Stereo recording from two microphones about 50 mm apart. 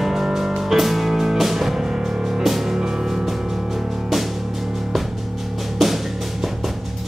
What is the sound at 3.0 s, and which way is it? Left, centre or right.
Music, centre.